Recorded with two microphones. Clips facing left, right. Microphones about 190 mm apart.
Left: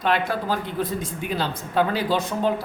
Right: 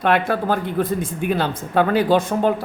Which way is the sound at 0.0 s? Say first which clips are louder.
Right 5 dB; 55° right (ahead or behind).